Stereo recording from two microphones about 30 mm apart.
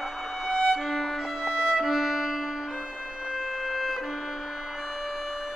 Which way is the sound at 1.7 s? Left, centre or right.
Centre.